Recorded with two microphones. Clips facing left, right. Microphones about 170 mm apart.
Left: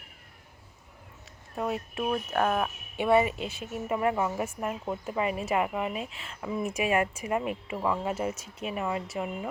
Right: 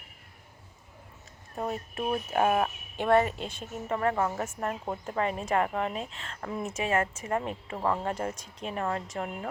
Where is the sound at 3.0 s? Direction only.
5° left (ahead or behind).